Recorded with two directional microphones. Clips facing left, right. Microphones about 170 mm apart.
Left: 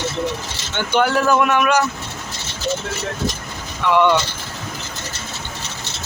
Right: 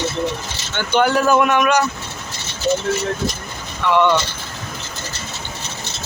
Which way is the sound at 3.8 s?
10° left (ahead or behind).